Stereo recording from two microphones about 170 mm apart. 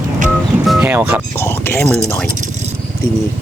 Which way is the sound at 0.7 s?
10° right (ahead or behind).